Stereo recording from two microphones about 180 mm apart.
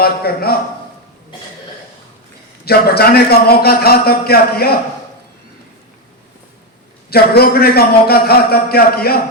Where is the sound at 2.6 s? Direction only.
60° left (ahead or behind).